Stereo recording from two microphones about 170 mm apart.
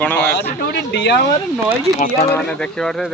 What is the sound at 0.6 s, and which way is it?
Speech, 80° left.